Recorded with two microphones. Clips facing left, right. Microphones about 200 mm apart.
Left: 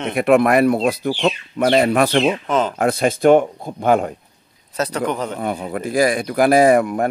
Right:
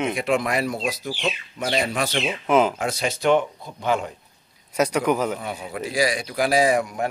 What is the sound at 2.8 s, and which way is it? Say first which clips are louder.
Speech: left 8 dB; 55° left (ahead or behind).